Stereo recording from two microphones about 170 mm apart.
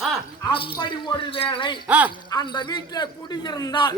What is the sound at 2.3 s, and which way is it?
A man's voice, 25° left (ahead or behind).